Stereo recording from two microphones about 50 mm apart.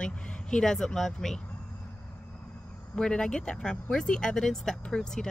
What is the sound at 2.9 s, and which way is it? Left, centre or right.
Speech, centre.